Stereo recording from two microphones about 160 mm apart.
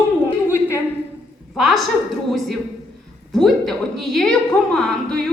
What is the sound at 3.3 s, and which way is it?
A woman's voice, centre (ahead or behind).